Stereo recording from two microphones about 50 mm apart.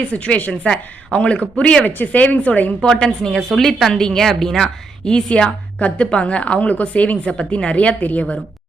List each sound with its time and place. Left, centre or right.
0.1 s a woman's voice: left
1.8 s a woman's voice: left
2.8 s a woman's voice: centre; by 8.4 s left